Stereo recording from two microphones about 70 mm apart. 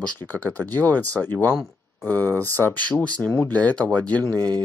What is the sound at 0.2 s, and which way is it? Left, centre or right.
Speech, left.